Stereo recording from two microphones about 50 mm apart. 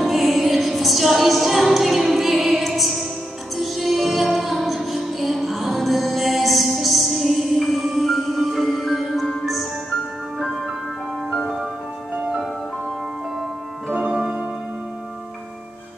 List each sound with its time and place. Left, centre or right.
0.0 s music: centre
14.1 s music: centre